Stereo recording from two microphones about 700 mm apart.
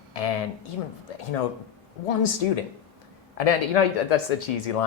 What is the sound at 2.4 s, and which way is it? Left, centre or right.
Speech, left.